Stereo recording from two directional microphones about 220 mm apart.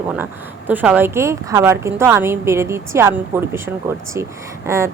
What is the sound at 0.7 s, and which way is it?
A woman's voice, 10° right (ahead or behind).